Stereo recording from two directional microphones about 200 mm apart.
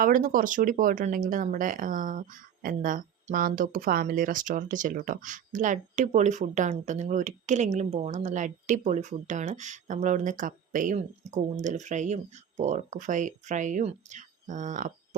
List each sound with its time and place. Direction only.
0.0 s speech: 40° right (ahead or behind)